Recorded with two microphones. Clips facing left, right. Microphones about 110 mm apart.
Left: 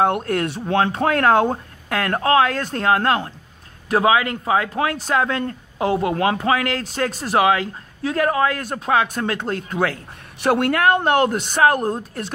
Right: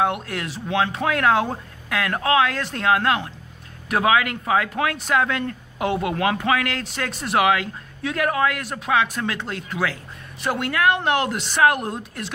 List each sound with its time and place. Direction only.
0.0 s a woman's voice: 45° left (ahead or behind)
10.4 s speech: 65° left (ahead or behind)
10.7 s a woman's voice: 45° left (ahead or behind)